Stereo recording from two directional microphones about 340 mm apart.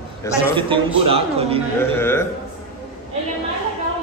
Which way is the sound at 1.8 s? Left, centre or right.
Centre.